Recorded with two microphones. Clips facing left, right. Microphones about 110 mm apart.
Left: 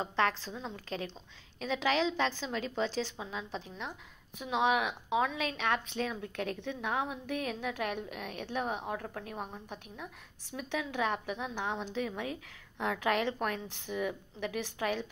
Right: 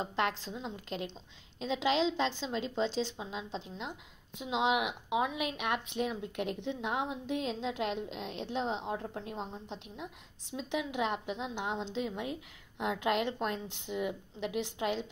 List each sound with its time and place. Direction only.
0.3 s a woman's voice: 35° right (ahead or behind)
1.6 s speech: 25° right (ahead or behind)